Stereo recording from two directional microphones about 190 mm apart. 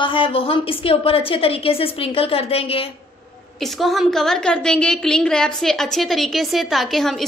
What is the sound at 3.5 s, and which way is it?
A woman's voice, centre (ahead or behind).